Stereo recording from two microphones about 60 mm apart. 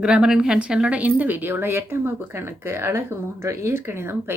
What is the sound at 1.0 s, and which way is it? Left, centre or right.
Speech, right.